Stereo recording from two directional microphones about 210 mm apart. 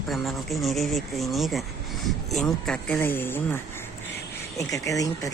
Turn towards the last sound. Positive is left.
turn(degrees=15)  # may be behind; listen again after turning